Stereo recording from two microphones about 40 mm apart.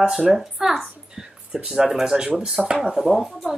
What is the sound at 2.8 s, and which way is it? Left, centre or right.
Speech, centre.